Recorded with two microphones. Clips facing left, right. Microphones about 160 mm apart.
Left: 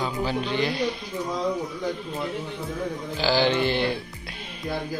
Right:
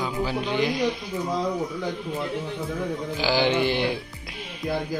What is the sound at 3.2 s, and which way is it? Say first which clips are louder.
Speech: left 1 dB; 15° right (ahead or behind).